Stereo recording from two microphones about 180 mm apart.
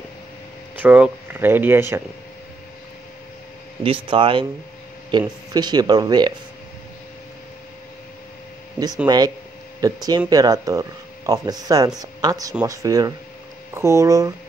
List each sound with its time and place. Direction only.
0.8 s speech: 10° right (ahead or behind)
3.8 s speech: 30° right (ahead or behind)
9.0 s speech: 20° right (ahead or behind)